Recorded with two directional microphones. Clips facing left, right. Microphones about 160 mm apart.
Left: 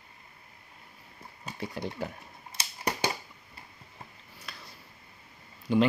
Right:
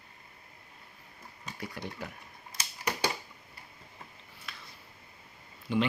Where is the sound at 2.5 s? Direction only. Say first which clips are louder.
Left 2 dB; 35° left (ahead or behind).